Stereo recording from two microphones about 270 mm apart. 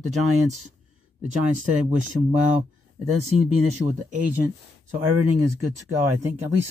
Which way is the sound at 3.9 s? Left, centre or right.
Right.